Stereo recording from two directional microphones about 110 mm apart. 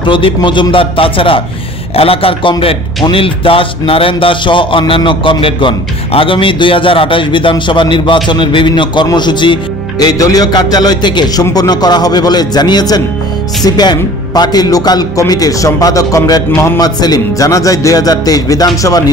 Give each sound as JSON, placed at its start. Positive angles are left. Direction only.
{"t": 0.0, "sound": "a man's voice", "side_deg": 50}
{"t": 16.8, "sound": "speech", "side_deg": 35}